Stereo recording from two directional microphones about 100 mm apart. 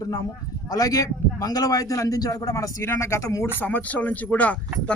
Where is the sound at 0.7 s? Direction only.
35° left (ahead or behind).